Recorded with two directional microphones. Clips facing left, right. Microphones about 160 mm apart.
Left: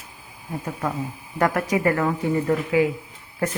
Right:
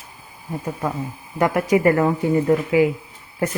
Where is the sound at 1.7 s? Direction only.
25° right (ahead or behind).